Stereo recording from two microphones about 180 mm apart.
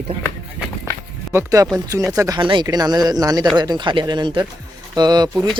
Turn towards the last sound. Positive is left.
turn(degrees=-25)  # may be behind; listen again after turning